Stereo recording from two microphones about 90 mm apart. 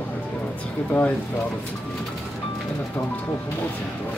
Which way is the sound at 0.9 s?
15° left (ahead or behind).